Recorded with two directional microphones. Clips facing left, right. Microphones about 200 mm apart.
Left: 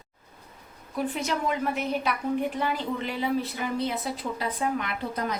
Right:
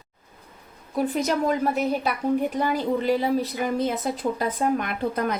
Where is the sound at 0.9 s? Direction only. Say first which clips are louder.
Right 5 dB; 40° right (ahead or behind).